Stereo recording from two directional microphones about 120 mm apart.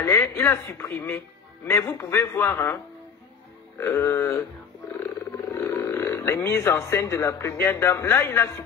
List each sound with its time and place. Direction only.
0.0 s speech: 20° left (ahead or behind)